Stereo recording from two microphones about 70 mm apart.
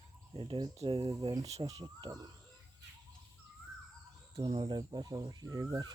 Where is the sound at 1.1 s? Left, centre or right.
Right.